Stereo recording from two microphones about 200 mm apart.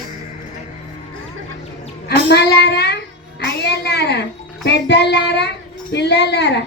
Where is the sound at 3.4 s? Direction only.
55° left (ahead or behind).